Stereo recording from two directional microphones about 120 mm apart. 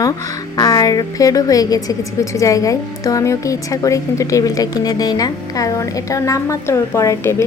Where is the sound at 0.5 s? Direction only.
30° left (ahead or behind).